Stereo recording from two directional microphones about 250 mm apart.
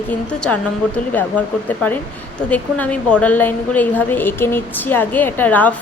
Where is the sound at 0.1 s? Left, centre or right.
Centre.